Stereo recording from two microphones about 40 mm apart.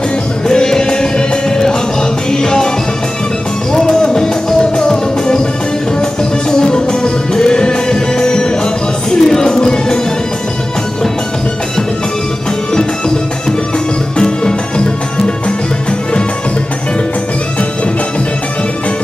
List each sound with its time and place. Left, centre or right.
0.5 s music: centre
3.7 s music: centre
6.5 s music: left
14.1 s music: left